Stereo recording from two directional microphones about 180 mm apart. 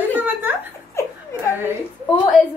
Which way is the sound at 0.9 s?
15° left (ahead or behind).